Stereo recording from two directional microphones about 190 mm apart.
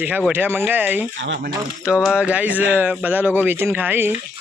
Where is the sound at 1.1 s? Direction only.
70° right (ahead or behind).